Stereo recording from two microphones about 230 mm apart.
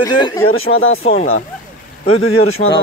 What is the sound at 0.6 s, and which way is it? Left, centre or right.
Speech, left.